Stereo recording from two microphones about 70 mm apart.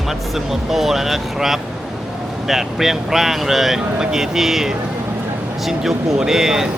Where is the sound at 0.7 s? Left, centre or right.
Centre.